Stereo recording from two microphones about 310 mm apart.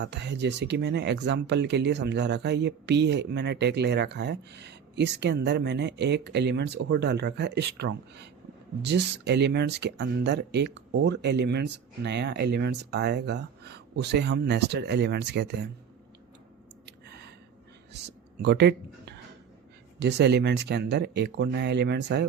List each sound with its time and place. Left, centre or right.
0.0 s speech: right
18.0 s speech: right